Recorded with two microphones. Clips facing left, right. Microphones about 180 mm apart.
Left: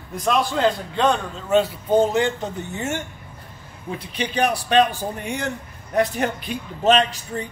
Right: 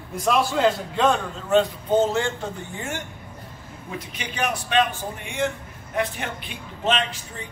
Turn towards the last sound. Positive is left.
turn(degrees=40)  # may be behind; listen again after turning